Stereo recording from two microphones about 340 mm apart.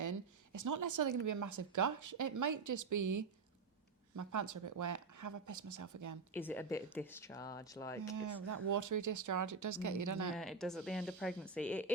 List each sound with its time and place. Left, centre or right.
0.0 s speech: right
6.3 s speech: centre
8.1 s speech: right
10.3 s speech: centre